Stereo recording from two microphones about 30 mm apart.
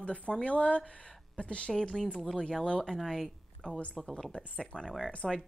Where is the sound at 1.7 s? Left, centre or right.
Left.